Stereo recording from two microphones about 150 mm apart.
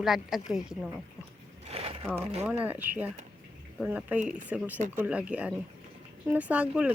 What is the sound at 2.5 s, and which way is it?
Speech, 10° right (ahead or behind).